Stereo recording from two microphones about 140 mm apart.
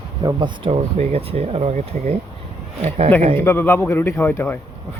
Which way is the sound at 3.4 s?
15° left (ahead or behind).